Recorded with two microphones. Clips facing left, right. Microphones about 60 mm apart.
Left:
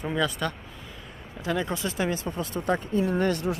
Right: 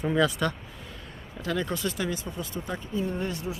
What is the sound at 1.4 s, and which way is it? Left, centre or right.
Speech, centre.